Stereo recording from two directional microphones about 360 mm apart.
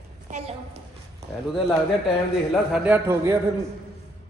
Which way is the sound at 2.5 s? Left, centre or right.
Centre.